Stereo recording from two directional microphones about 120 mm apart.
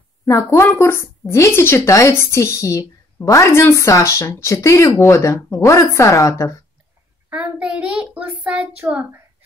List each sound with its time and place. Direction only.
0.2 s a woman's voice: 25° left (ahead or behind)
7.2 s a child's voice: 10° right (ahead or behind)
8.5 s child singing: 10° right (ahead or behind)